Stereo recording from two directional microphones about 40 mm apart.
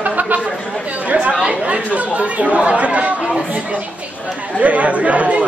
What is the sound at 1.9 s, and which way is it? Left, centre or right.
Speech, right.